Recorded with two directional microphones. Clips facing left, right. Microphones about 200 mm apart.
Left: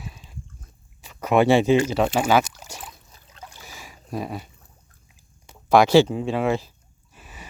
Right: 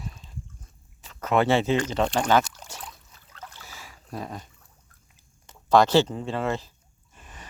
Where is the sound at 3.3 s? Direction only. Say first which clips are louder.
Left 1 dB; 15° left (ahead or behind).